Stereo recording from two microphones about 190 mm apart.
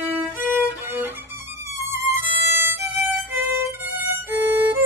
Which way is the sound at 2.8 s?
10° right (ahead or behind).